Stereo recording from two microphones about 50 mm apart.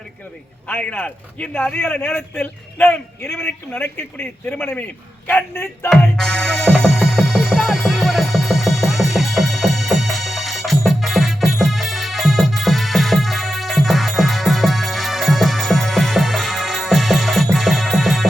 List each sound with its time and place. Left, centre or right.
0.7 s speech: left
1.7 s speech: left
6.1 s music: centre